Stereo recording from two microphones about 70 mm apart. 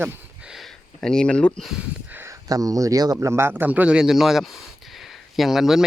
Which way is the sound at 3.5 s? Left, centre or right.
Right.